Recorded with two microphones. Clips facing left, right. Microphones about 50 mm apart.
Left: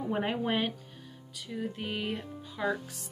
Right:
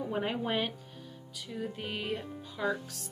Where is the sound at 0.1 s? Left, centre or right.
Centre.